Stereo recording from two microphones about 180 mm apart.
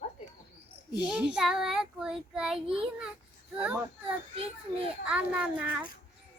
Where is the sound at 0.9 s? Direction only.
5° right (ahead or behind).